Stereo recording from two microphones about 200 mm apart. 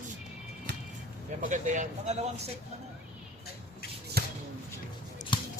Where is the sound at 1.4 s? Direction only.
40° right (ahead or behind).